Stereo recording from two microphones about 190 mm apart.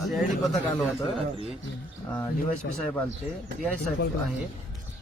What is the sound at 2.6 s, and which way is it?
Speech, 60° left (ahead or behind).